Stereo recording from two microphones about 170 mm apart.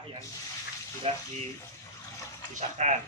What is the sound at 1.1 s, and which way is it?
Speech, 35° right (ahead or behind).